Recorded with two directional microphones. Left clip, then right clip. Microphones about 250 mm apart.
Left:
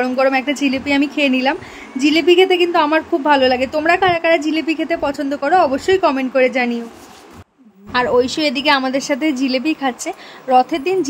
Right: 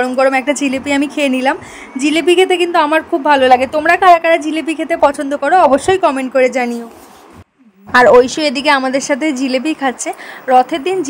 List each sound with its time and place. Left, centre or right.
0.0 s a woman's voice: centre
7.9 s a woman's voice: centre